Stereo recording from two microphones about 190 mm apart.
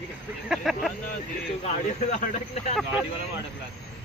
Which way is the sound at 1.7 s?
40° left (ahead or behind).